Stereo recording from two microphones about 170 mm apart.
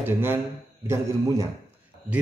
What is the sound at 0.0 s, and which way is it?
A man's voice, 15° right (ahead or behind).